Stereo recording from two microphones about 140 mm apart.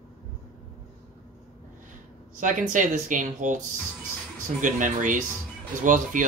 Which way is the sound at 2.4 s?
65° right (ahead or behind).